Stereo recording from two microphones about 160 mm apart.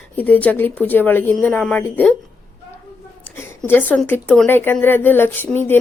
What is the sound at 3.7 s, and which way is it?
A woman's voice, 10° left (ahead or behind).